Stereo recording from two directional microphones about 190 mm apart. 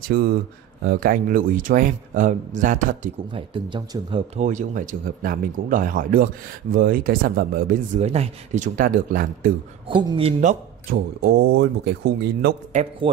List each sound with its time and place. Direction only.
0.1 s speech: 55° right (ahead or behind)
3.3 s speech: 25° right (ahead or behind)
4.4 s speech: 40° right (ahead or behind)
8.0 s speech: 35° right (ahead or behind)
9.8 s speech: 25° right (ahead or behind)
10.4 s a man's voice: 40° right (ahead or behind)
11.2 s speech: 60° right (ahead or behind)
13.0 s speech: 30° right (ahead or behind)